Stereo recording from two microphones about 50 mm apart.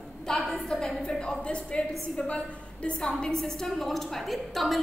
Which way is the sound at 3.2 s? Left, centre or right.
Centre.